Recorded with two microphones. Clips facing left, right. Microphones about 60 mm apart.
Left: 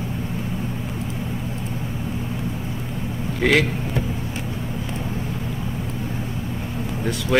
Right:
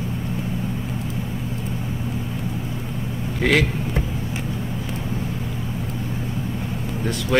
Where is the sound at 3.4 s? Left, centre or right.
Centre.